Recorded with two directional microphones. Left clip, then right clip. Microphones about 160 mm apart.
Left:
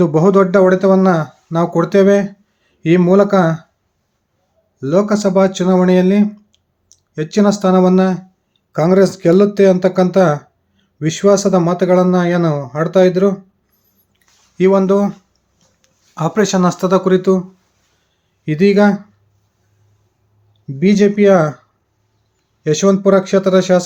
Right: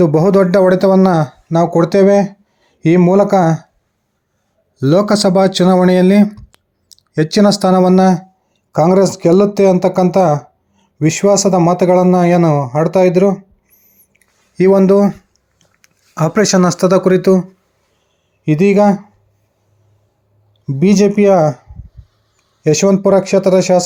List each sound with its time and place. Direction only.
0.0 s speech: 30° right (ahead or behind)
4.8 s speech: 55° right (ahead or behind)
8.7 s speech: 30° right (ahead or behind)
14.1 s a sound: 30° right (ahead or behind)
18.4 s speech: 25° right (ahead or behind)
20.7 s speech: 30° right (ahead or behind)
22.6 s speech: 25° right (ahead or behind)